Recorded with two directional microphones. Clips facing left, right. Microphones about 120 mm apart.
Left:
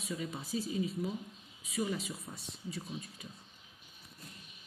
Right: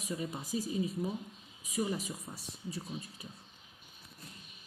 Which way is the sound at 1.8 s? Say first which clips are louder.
Right 1 dB; 15° right (ahead or behind).